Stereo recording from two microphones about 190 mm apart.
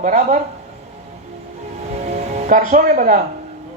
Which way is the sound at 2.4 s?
40° right (ahead or behind).